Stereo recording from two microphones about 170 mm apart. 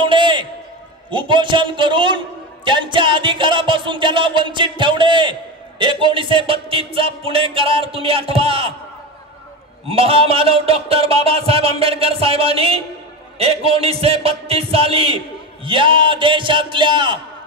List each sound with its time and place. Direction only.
0.0 s a sound: 30° right (ahead or behind)
1.1 s a man's voice: 30° right (ahead or behind)
9.8 s speech: 35° right (ahead or behind)